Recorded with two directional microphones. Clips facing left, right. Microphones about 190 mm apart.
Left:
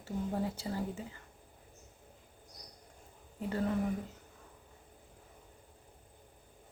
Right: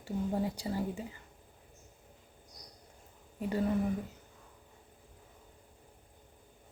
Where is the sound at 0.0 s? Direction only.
15° right (ahead or behind).